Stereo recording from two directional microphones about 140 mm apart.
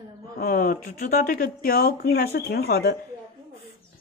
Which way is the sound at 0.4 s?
90° left.